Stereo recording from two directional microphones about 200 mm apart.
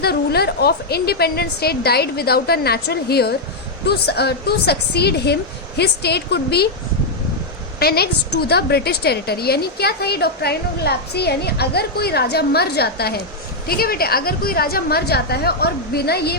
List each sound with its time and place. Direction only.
0.0 s a woman's voice: 50° left (ahead or behind)
7.8 s a woman's voice: 50° left (ahead or behind)